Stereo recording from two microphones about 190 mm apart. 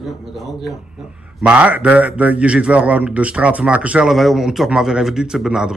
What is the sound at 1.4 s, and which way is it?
A man's voice, 5° right (ahead or behind).